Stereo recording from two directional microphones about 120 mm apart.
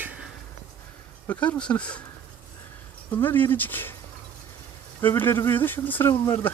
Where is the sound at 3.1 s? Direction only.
15° left (ahead or behind).